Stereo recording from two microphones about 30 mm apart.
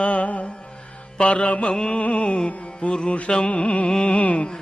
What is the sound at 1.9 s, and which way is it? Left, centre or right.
Music, left.